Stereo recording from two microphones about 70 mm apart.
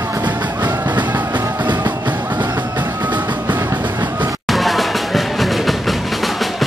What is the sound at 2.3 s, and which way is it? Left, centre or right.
Music, right.